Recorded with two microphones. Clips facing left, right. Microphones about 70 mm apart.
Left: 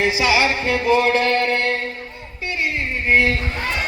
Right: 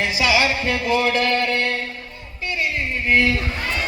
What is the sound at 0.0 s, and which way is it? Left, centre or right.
Music, left.